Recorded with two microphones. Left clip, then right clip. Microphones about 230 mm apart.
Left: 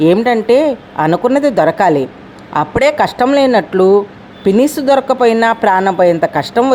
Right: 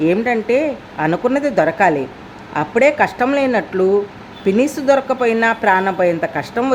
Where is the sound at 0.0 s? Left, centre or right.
Centre.